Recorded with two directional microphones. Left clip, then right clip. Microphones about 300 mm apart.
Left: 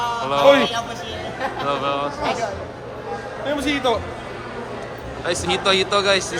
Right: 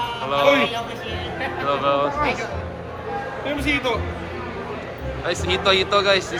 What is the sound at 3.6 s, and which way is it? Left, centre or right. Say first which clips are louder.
Speech: left 1 dB; left.